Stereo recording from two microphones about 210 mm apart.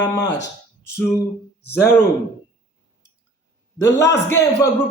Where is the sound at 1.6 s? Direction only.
10° left (ahead or behind).